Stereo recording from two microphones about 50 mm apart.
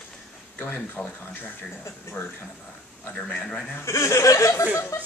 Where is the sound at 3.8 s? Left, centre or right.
Left.